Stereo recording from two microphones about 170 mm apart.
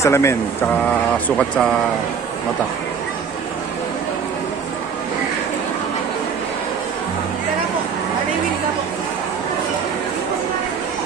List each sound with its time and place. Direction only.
0.0 s speech: 15° left (ahead or behind)
1.4 s speech: 5° left (ahead or behind)